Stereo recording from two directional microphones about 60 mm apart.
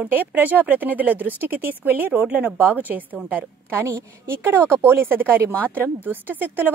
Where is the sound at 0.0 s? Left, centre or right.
Right.